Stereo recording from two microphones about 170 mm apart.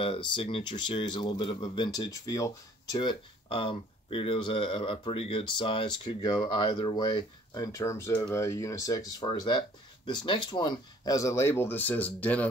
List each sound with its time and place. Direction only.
0.0 s speech: 30° left (ahead or behind); by 12.4 s 10° left (ahead or behind)